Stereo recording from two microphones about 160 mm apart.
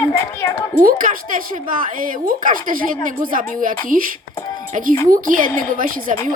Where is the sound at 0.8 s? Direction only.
60° right (ahead or behind).